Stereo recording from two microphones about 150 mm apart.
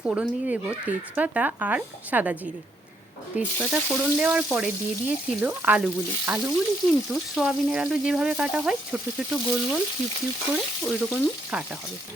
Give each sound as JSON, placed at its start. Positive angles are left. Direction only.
{"t": 0.0, "sound": "speech", "side_deg": -10}